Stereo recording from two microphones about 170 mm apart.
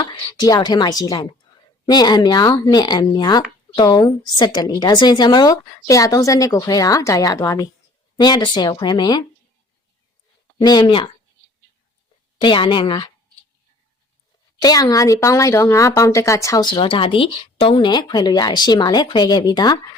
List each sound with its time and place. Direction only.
0.0 s a woman's voice: 25° left (ahead or behind)
10.6 s a woman's voice: 25° left (ahead or behind)
12.4 s a woman's voice: 30° left (ahead or behind)
14.6 s a woman's voice: 20° left (ahead or behind)